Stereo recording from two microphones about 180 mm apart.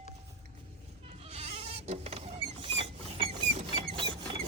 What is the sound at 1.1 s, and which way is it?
Creak, 35° right (ahead or behind).